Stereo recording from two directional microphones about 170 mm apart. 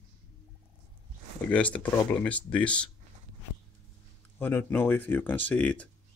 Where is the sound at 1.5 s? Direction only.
10° left (ahead or behind).